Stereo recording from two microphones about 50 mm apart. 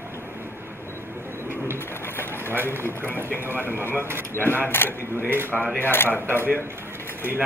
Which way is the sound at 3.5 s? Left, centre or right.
Right.